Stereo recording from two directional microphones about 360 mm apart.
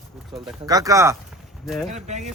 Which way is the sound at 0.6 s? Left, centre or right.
Centre.